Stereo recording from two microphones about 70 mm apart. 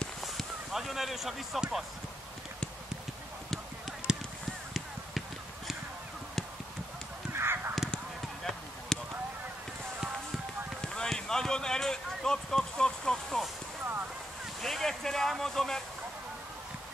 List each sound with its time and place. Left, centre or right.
0.2 s speech: centre
4.1 s honk: centre
7.3 s honk: right
8.5 s a sound: centre
11.0 s a sound: centre
14.6 s speech: centre